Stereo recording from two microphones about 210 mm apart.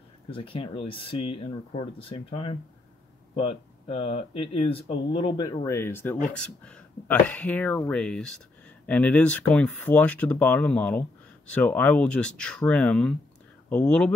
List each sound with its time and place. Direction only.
0.3 s speech: 25° left (ahead or behind); by 14.1 s 5° left (ahead or behind)